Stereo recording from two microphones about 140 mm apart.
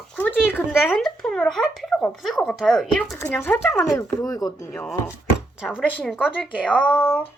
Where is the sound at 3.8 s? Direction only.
25° left (ahead or behind).